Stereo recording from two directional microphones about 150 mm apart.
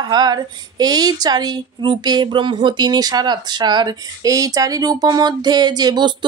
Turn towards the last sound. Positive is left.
turn(degrees=-30)  # may be behind; listen again after turning